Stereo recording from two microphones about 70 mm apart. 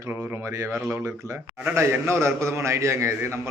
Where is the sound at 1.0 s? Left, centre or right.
Right.